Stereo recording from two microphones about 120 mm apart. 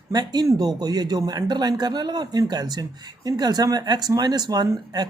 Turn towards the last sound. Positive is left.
turn(degrees=-35)  # may be behind; listen again after turning